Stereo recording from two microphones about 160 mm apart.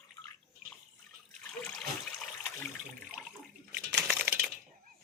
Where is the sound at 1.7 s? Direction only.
5° left (ahead or behind).